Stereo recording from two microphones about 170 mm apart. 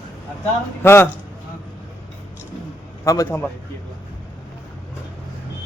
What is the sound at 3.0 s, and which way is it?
Speech, 20° left (ahead or behind).